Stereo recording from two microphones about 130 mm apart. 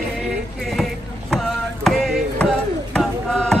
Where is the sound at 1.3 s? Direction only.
Centre (ahead or behind).